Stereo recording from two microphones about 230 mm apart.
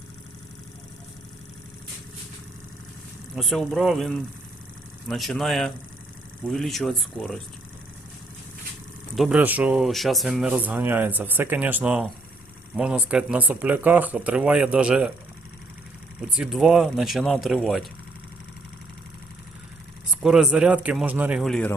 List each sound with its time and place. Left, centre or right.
3.3 s speech: centre
9.1 s speech: centre
16.3 s speech: centre
20.2 s speech: centre